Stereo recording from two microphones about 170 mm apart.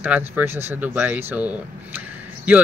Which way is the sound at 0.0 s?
10° right (ahead or behind).